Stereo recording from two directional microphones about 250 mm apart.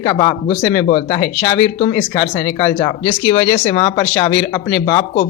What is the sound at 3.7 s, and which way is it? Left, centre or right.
Speech, centre.